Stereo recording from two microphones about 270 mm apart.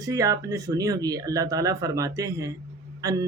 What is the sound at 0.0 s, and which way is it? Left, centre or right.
A man's voice, centre.